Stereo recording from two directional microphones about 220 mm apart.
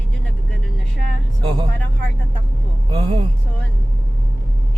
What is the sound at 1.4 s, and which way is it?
Vehicle, 20° right (ahead or behind).